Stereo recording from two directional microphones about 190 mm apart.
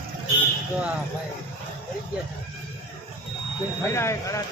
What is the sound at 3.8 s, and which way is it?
Speech, 15° left (ahead or behind).